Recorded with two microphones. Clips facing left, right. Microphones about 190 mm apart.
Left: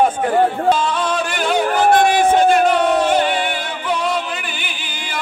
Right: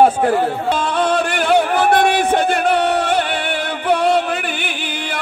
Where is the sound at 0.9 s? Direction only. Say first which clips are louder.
Right 3 dB; 60° right (ahead or behind).